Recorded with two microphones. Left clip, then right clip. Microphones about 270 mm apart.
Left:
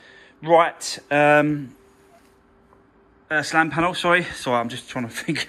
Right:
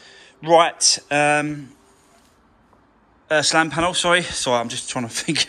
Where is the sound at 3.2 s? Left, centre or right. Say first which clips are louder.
Right 3 dB; centre.